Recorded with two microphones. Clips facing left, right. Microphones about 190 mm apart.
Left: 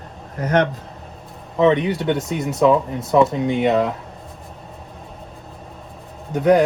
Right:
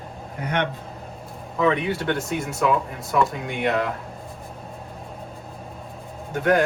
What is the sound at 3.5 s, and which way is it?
Speech, centre (ahead or behind).